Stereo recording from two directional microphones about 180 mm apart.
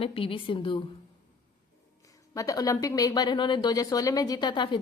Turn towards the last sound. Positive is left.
turn(degrees=25)  # may be behind; listen again after turning